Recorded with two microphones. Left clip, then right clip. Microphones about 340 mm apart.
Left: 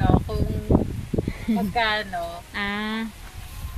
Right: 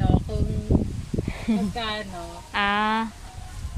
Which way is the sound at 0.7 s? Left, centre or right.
Left.